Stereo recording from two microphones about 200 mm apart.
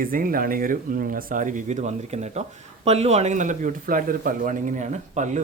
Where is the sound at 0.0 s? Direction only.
45° right (ahead or behind).